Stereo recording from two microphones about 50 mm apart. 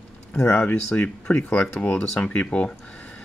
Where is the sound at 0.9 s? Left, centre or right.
Left.